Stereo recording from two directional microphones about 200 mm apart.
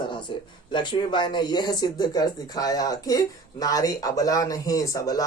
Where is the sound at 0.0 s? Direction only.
25° left (ahead or behind).